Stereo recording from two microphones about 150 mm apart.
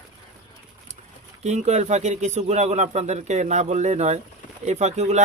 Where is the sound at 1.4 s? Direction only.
50° right (ahead or behind).